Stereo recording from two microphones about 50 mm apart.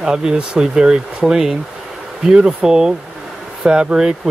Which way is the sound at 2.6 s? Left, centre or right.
Centre.